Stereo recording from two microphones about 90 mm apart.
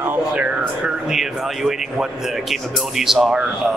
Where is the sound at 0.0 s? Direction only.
20° right (ahead or behind).